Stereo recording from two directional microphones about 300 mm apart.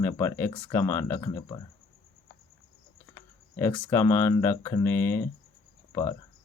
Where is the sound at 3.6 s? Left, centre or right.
Centre.